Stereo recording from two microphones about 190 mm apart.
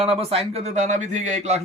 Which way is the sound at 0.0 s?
30° right (ahead or behind).